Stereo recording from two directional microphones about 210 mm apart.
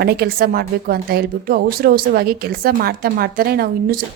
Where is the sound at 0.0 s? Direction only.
50° right (ahead or behind).